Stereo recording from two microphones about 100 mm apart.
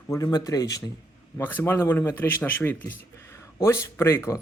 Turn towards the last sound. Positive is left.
turn(degrees=30)  # may be behind; listen again after turning